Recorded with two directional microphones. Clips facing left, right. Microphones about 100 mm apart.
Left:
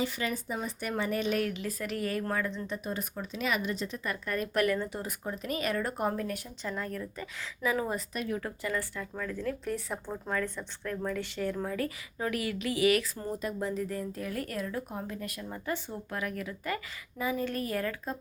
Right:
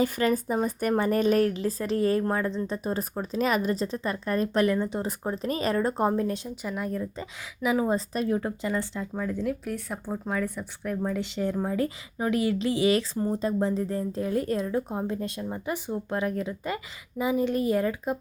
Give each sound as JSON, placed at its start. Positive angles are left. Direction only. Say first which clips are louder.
{"t": 0.0, "sound": "a woman's voice", "louder": "right 8 dB", "side_deg": -45}
{"t": 6.6, "sound": "speech", "louder": "right 5 dB", "side_deg": -10}
{"t": 7.9, "sound": "a woman's voice", "louder": "right 7 dB", "side_deg": -35}
{"t": 9.6, "sound": "a woman's voice", "louder": "right 2 dB", "side_deg": 0}